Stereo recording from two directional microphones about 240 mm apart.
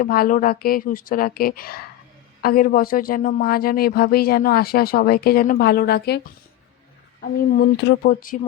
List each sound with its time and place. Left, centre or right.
0.0 s speech: left